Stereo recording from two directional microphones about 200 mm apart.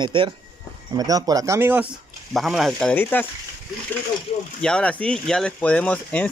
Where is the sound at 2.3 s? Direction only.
Centre (ahead or behind).